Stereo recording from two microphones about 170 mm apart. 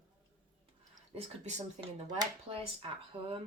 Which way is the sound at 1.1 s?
45° right (ahead or behind).